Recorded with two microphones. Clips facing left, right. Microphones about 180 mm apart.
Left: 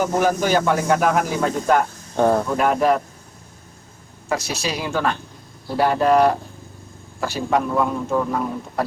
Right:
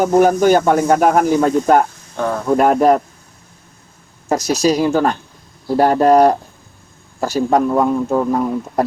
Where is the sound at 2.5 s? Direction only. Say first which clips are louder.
Right 6 dB; 45° right (ahead or behind).